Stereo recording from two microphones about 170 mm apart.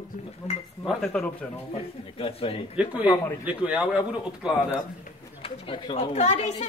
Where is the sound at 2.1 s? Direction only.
35° left (ahead or behind).